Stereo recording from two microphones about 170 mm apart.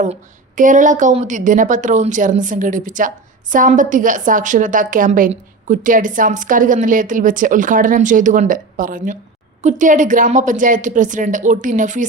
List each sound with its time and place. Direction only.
0.0 s a woman's voice: 50° right (ahead or behind)